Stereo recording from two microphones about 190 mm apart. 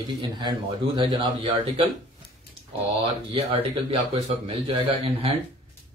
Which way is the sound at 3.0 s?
30° right (ahead or behind).